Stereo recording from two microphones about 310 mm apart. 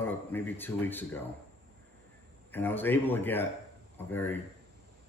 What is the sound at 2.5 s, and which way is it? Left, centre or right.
Speech, centre.